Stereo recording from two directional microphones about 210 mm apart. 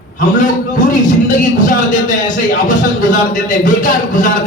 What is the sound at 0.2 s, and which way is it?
A man's voice, 35° left (ahead or behind).